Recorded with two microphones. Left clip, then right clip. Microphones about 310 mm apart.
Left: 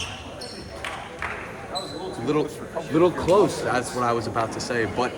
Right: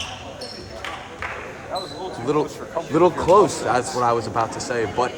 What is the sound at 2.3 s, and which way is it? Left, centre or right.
Speech, centre.